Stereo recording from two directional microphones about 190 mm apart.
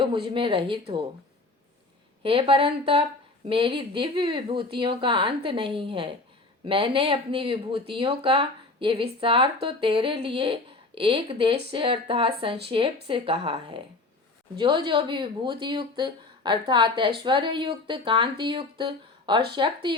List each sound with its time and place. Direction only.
0.3 s speech: 25° right (ahead or behind)
2.2 s speech: 30° right (ahead or behind)